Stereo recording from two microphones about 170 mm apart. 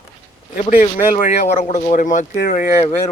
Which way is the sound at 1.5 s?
45° left (ahead or behind).